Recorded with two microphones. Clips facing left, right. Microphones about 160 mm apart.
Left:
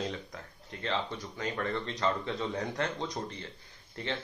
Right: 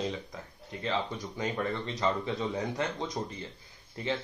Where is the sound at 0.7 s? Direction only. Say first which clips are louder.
Right 2 dB; 5° right (ahead or behind).